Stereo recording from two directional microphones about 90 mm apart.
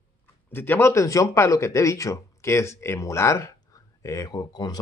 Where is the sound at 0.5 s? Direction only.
25° left (ahead or behind).